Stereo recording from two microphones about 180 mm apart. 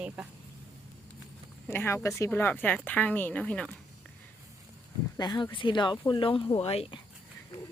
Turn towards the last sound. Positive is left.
turn(degrees=35)  # may be behind; listen again after turning